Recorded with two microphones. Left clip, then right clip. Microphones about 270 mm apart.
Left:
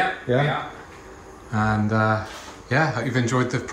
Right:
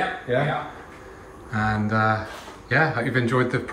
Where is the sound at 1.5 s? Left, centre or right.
Centre.